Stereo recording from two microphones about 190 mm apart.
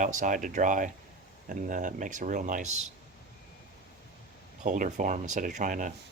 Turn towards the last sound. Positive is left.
turn(degrees=-40)  # may be behind; listen again after turning